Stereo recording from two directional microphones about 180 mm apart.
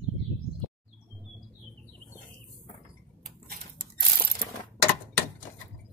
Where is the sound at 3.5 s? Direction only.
55° right (ahead or behind).